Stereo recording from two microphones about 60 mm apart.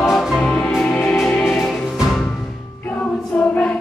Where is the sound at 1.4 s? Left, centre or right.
Centre.